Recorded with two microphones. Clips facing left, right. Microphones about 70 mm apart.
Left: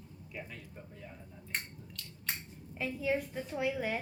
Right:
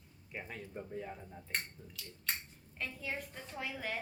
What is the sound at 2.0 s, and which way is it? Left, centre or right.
A woman's voice, centre.